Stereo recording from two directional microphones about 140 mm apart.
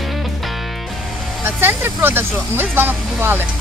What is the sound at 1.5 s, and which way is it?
Speech, 15° right (ahead or behind).